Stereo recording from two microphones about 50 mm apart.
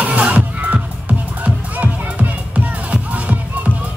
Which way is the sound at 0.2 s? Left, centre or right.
Right.